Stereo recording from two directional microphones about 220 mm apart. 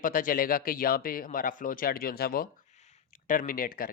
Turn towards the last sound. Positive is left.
turn(degrees=40)  # may be behind; listen again after turning